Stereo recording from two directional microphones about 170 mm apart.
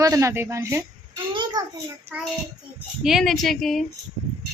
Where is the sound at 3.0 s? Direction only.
Centre (ahead or behind).